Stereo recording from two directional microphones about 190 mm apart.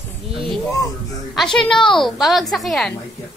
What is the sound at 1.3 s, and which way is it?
A woman's voice, 5° left (ahead or behind).